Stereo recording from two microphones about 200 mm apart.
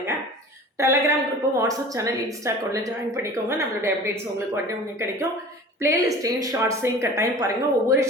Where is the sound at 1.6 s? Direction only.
15° right (ahead or behind).